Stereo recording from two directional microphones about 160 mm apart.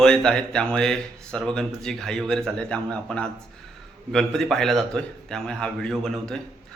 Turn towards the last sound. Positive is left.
turn(degrees=5)  # may be behind; listen again after turning